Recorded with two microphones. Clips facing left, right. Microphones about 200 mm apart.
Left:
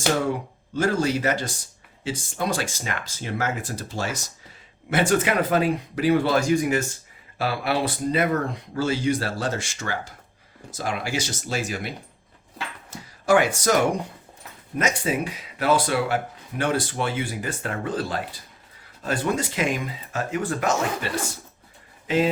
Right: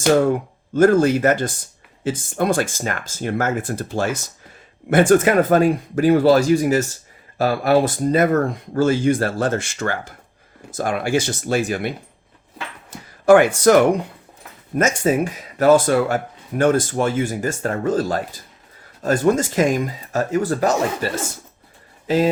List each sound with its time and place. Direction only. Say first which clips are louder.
0.7 s speech: right 9 dB; 50° right (ahead or behind)
13.2 s speech: right 8 dB; 55° right (ahead or behind)
14.8 s speech: right 7 dB; 45° right (ahead or behind)